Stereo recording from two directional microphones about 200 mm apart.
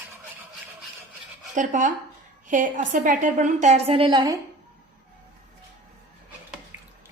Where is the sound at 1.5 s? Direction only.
40° right (ahead or behind); by 4.3 s 20° right (ahead or behind).